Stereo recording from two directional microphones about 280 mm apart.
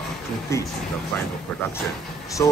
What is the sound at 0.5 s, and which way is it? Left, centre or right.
Speech, centre.